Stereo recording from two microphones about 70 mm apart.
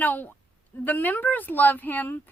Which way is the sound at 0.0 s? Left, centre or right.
Left.